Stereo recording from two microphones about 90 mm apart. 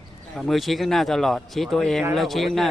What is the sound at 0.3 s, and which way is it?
Speech, centre (ahead or behind).